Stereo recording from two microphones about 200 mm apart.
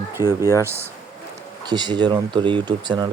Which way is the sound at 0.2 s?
20° left (ahead or behind).